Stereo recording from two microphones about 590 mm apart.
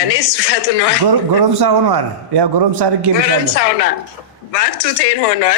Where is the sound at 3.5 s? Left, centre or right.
Left.